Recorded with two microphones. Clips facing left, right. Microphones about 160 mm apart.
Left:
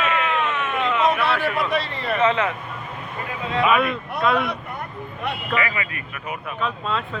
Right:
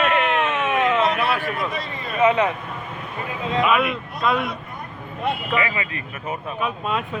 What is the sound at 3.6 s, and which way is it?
Speech, centre (ahead or behind).